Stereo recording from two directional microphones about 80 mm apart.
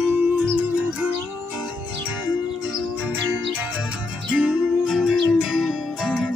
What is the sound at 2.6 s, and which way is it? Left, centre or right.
Music, centre.